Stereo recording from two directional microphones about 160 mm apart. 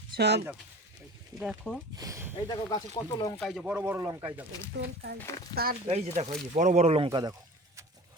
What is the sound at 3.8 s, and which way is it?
Speech, 15° right (ahead or behind).